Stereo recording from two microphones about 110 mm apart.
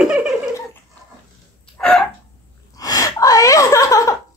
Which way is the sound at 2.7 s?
35° left (ahead or behind).